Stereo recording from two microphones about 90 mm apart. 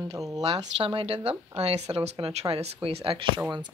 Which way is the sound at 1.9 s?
70° right (ahead or behind).